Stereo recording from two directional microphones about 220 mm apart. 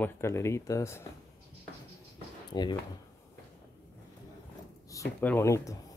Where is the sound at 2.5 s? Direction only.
20° left (ahead or behind).